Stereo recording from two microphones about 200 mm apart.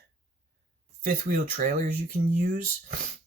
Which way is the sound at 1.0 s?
40° right (ahead or behind).